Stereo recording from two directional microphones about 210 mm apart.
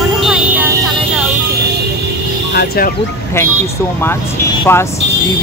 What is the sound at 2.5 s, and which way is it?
Speech, 45° left (ahead or behind).